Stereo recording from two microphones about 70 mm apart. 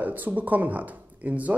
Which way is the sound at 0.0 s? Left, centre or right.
Right.